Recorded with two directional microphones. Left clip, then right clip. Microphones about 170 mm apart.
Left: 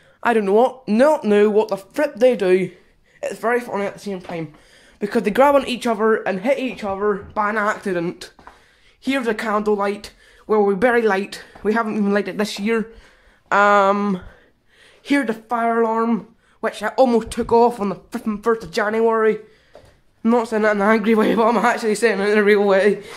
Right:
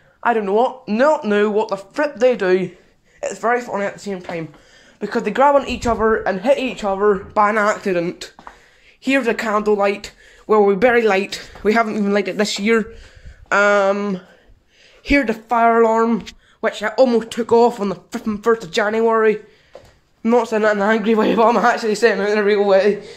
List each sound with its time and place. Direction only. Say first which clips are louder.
0.2 s speech: left 1 dB; 50° left (ahead or behind); by 4.5 s 15° left (ahead or behind)
5.0 s speech: left 1 dB; 35° left (ahead or behind)
5.3 s speech: right 1 dB; 45° left (ahead or behind)
5.7 s speech: right 1 dB; 25° left (ahead or behind)
6.4 s speech: right 4 dB; 10° left (ahead or behind)
7.3 s speech: right 6 dB; 15° right (ahead or behind)
7.6 s speech: right 3 dB; centre (ahead or behind)
8.0 s speech: right 3 dB; 15° left (ahead or behind)
13.8 s speech: even; 20° left (ahead or behind)
15.0 s speech: right 3 dB; 5° left (ahead or behind)
15.4 s speech: right 8 dB; 10° right (ahead or behind); by 20.7 s 10° left (ahead or behind)
20.7 s speech: even; 25° left (ahead or behind)
22.2 s speech: left 1 dB; 30° left (ahead or behind)